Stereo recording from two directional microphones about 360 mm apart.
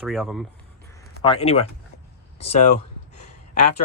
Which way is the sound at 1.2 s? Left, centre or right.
Centre.